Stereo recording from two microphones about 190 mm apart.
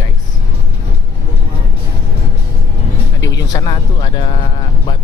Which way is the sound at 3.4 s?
20° left (ahead or behind).